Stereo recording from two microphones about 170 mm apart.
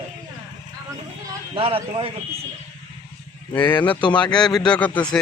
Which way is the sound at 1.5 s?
35° right (ahead or behind).